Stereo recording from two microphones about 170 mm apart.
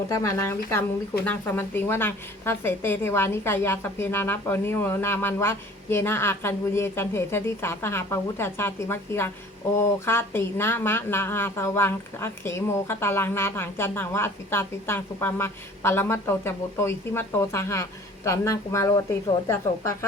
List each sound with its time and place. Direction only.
0.1 s a woman's voice: 20° left (ahead or behind)